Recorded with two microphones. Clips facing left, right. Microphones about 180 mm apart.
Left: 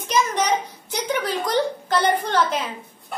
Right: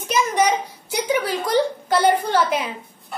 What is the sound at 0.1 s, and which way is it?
A child's voice, 10° right (ahead or behind).